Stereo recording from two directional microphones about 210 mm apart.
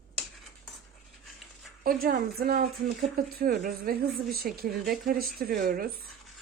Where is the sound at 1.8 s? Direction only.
45° right (ahead or behind).